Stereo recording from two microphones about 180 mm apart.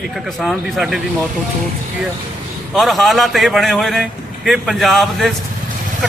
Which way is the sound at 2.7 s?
Centre (ahead or behind).